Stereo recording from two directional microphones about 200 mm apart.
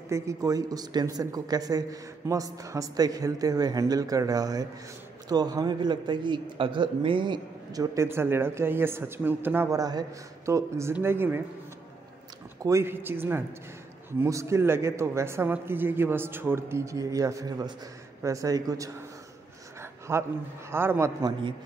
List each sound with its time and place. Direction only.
0.1 s a man's voice: 15° right (ahead or behind)
12.6 s a man's voice: 15° right (ahead or behind)
19.8 s a sound: 15° right (ahead or behind)
20.7 s a man's voice: 10° right (ahead or behind)